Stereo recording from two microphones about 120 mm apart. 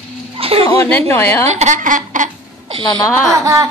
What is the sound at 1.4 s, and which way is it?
Speech, 70° right (ahead or behind).